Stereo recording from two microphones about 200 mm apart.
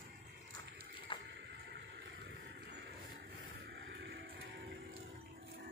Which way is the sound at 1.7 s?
55° right (ahead or behind).